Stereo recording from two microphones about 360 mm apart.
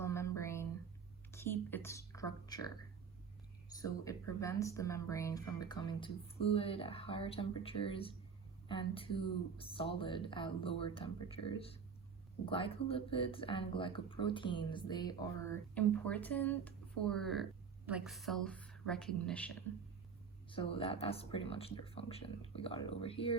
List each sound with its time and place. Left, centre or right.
0.0 s a sound: centre
3.7 s speech: centre
20.5 s speech: centre